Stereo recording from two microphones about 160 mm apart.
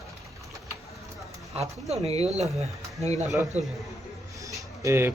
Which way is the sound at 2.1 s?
45° right (ahead or behind).